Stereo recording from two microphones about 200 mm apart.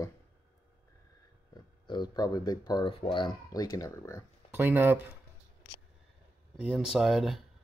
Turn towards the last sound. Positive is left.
turn(degrees=0)  # may be behind; listen again after turning